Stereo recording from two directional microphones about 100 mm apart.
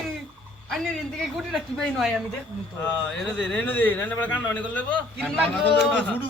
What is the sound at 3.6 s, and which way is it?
A man's voice, 20° left (ahead or behind).